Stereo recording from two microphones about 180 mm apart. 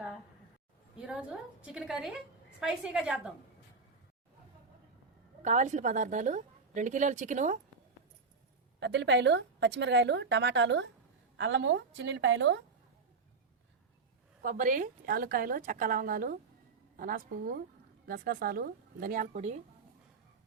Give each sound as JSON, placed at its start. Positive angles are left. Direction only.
{"t": 1.6, "sound": "a woman's voice", "side_deg": -5}
{"t": 5.4, "sound": "a woman's voice", "side_deg": -40}
{"t": 8.8, "sound": "a woman's voice", "side_deg": -75}
{"t": 14.4, "sound": "a woman's voice", "side_deg": -45}